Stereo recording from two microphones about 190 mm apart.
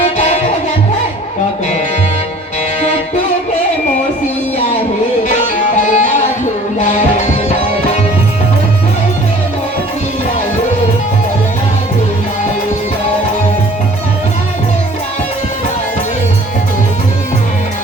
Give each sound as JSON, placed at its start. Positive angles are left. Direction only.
{"t": 0.0, "sound": "music", "side_deg": 35}
{"t": 5.9, "sound": "music", "side_deg": 40}